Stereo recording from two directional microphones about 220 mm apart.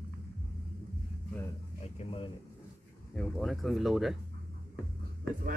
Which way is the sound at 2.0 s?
25° left (ahead or behind).